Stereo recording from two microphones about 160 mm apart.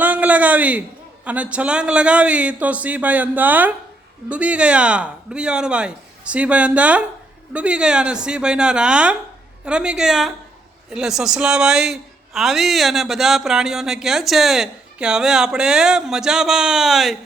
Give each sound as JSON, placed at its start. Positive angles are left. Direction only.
{"t": 0.0, "sound": "a man's voice", "side_deg": -10}